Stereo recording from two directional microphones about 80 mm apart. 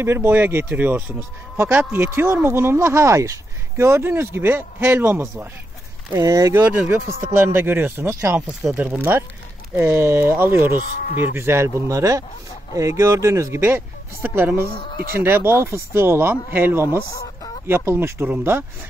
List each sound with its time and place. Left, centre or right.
0.0 s speech: right
6.1 s speech: right
6.9 s speech: right
8.3 s speech: centre
8.7 s speech: right
17.1 s chicken: left
17.6 s speech: right